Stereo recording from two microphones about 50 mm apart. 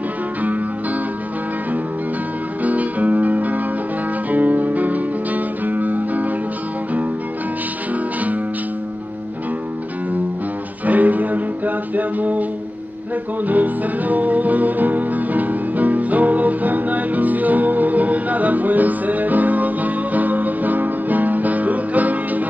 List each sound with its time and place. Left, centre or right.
2.6 s music: right
7.9 s music: right
10.9 s music: right
13.5 s music: right